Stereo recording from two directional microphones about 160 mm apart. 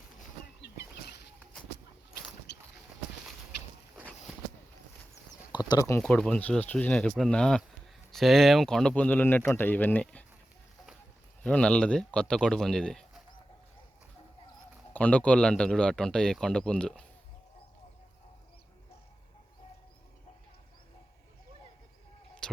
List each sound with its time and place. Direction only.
0.6 s a sound: 90° left
5.6 s speech: 20° left (ahead or behind)
6.0 s speech: 5° left (ahead or behind)
11.4 s speech: 5° left (ahead or behind)
14.9 s speech: 10° left (ahead or behind)
22.4 s a sound: 5° left (ahead or behind)